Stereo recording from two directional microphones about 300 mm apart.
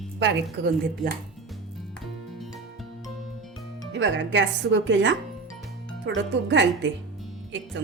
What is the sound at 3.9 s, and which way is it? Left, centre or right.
Speech, right.